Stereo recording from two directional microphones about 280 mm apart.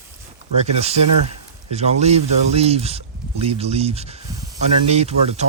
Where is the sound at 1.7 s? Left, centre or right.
Right.